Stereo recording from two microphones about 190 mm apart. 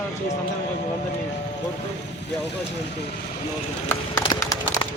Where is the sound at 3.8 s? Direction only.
20° left (ahead or behind).